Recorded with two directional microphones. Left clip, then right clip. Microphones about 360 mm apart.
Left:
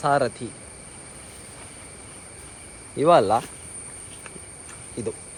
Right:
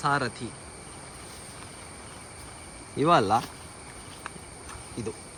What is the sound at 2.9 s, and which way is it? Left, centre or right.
Speech, centre.